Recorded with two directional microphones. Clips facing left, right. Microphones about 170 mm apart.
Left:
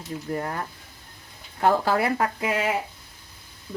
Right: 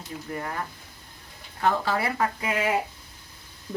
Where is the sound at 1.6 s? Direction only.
45° left (ahead or behind).